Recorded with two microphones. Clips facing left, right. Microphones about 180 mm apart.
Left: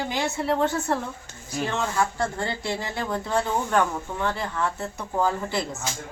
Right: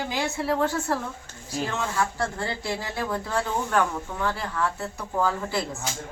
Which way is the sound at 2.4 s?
Centre (ahead or behind).